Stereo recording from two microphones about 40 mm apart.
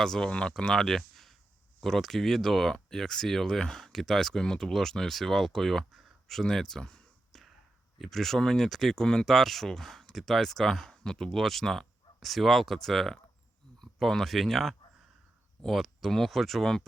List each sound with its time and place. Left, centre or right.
0.0 s speech: centre
0.3 s speech: left
0.5 s speech: centre
7.3 s a sound: centre
8.4 s speech: centre
9.2 s speech: centre